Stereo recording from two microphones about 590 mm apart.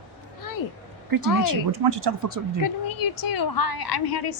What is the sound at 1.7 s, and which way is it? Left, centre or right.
Speech, right.